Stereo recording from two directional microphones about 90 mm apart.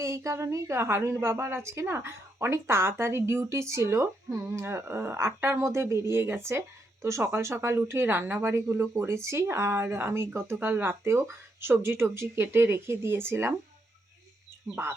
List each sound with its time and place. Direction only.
0.0 s a woman's voice: 35° right (ahead or behind)
14.7 s speech: 15° right (ahead or behind)